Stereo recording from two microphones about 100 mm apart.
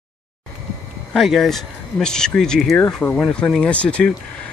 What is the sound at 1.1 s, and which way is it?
Speech, centre (ahead or behind).